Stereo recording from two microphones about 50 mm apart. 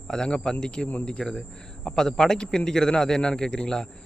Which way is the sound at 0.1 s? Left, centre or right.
Centre.